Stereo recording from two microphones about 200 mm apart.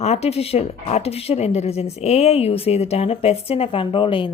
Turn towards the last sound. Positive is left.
turn(degrees=25)  # may be behind; listen again after turning